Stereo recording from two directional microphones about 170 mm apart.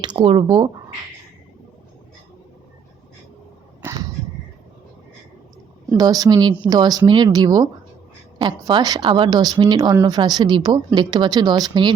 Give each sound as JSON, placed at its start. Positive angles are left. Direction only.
{"t": 0.0, "sound": "a woman's voice", "side_deg": -25}
{"t": 3.8, "sound": "a sound", "side_deg": -20}
{"t": 6.0, "sound": "a woman's voice", "side_deg": -20}